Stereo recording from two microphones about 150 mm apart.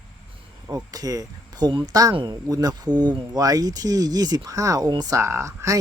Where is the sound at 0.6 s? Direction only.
25° right (ahead or behind).